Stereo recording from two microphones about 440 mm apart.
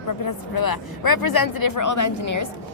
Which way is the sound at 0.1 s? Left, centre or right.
Left.